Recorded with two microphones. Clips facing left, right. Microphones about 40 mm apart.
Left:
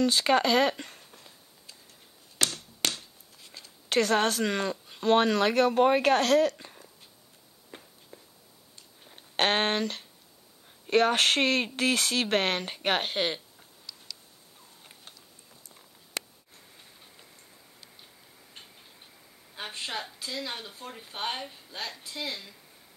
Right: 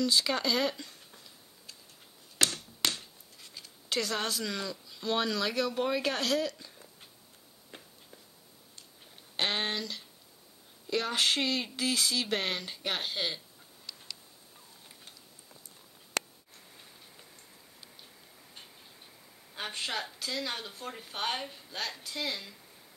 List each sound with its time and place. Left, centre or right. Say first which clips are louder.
0.0 s speech: left 5 dB; left
3.9 s speech: left 8 dB; left
8.1 s a sound: left 5 dB; centre
9.1 s speech: left 6 dB; left
19.5 s a woman's voice: even; centre